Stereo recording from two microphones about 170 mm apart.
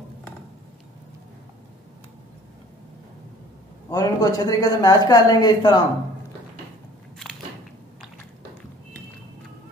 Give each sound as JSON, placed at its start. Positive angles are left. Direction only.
{"t": 3.9, "sound": "speech", "side_deg": 20}